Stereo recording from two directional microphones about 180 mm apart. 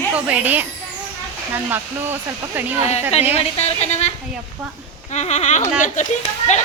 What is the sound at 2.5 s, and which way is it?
Speech, 10° right (ahead or behind).